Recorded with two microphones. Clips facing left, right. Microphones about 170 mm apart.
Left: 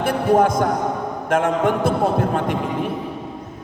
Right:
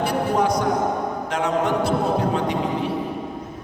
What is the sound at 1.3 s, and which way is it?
A man's voice, 50° left (ahead or behind).